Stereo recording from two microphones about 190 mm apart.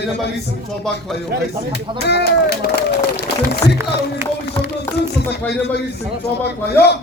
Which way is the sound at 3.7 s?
10° right (ahead or behind).